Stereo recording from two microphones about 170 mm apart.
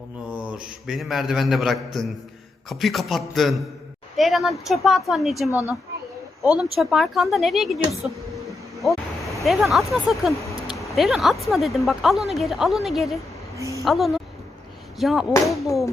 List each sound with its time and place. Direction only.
0.3 s a man's voice: 5° right (ahead or behind)
9.4 s a man's voice: centre (ahead or behind)
13.6 s a woman's voice: 20° right (ahead or behind)
13.8 s a man's voice: centre (ahead or behind)